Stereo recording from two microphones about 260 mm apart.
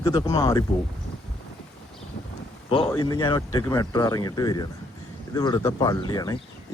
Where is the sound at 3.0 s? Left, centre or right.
Centre.